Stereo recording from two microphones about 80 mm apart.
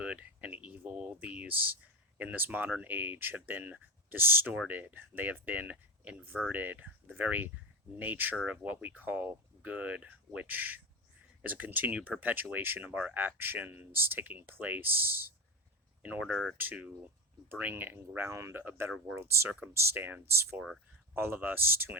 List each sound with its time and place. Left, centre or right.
0.0 s a sound: centre
4.5 s speech: centre
16.7 s speech: centre; by 18.6 s right
18.6 s speech: right